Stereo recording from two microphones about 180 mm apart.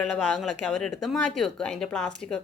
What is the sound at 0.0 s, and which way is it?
Speech, centre (ahead or behind).